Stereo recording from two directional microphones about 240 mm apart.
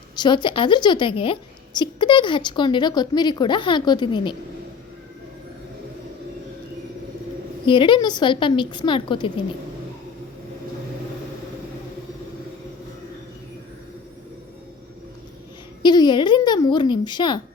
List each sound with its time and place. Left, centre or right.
0.2 s a woman's voice: centre
7.6 s a woman's voice: centre
15.8 s speech: centre